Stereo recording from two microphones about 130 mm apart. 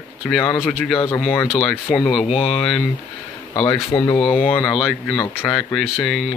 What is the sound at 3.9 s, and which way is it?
Speech, 25° left (ahead or behind).